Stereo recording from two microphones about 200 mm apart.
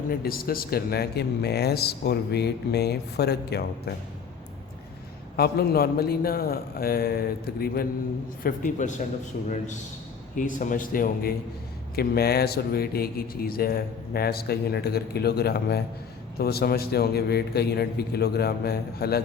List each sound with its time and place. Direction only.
0.1 s speech: 45° left (ahead or behind)
5.4 s speech: 50° left (ahead or behind)
10.3 s speech: 40° left (ahead or behind)